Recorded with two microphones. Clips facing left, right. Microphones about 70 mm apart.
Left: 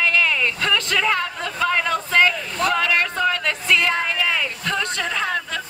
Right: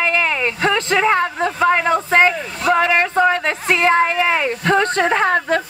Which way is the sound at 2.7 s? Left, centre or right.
Right.